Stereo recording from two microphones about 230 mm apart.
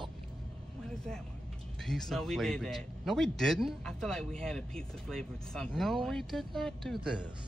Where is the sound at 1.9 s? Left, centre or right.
Centre.